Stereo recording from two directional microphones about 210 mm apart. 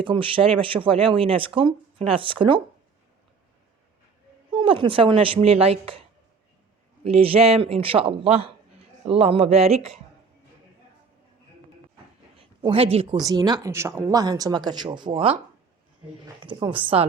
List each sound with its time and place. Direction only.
0.0 s speech: 25° right (ahead or behind)
4.5 s speech: 25° right (ahead or behind)
12.4 s speech: 25° right (ahead or behind)
16.4 s speech: 20° right (ahead or behind)